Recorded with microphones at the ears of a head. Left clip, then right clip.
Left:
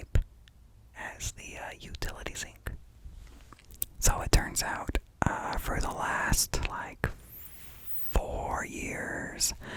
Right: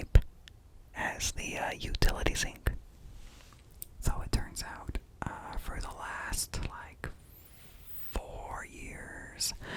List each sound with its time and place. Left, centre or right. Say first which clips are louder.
0.9 s speech: right 6 dB; right
3.5 s speech: left 9 dB; left
8.1 s whispering: left 8 dB; left